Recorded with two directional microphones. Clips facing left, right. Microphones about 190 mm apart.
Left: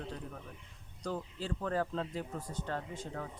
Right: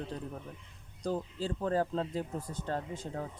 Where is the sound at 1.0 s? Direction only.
35° right (ahead or behind).